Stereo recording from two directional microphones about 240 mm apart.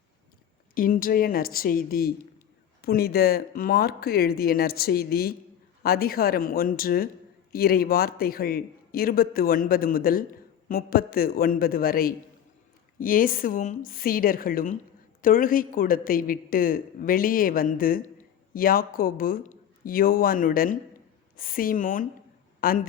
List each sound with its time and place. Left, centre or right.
0.7 s a man's voice: left